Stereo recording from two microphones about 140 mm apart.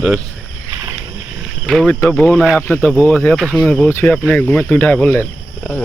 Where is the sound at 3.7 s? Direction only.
10° left (ahead or behind).